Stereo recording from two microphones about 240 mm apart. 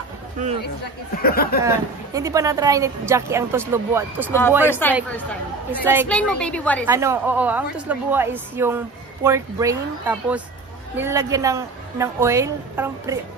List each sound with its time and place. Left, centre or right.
1.2 s speech: left
2.1 s speech: centre
4.6 s speech: centre
5.7 s speech: centre
6.0 s a woman's voice: centre
6.9 s speech: centre